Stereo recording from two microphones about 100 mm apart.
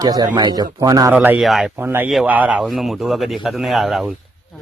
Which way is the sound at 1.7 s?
20° right (ahead or behind).